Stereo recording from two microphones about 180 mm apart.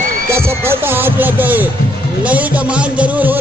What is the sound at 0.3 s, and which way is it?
Speech, 15° right (ahead or behind).